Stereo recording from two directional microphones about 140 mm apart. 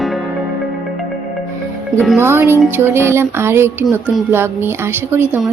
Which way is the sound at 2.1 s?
15° right (ahead or behind).